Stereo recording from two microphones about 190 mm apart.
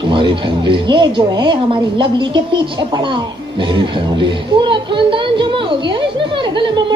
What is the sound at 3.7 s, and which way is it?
Speech, 25° right (ahead or behind).